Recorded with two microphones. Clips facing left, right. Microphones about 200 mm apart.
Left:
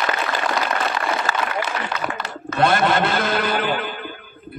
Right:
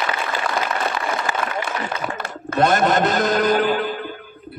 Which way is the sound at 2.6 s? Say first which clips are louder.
Right 1 dB; 40° right (ahead or behind).